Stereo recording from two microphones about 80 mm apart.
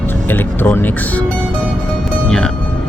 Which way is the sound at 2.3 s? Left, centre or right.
Centre.